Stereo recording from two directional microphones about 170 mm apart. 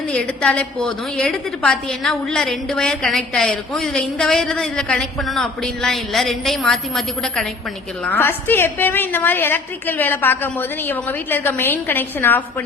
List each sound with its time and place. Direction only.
0.1 s a woman's voice: 5° left (ahead or behind)